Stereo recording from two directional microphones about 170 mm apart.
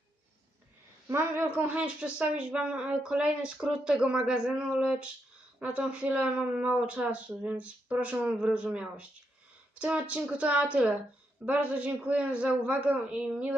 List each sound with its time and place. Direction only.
1.0 s speech: 15° right (ahead or behind)